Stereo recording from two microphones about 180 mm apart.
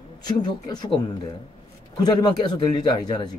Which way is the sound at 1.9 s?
25° left (ahead or behind).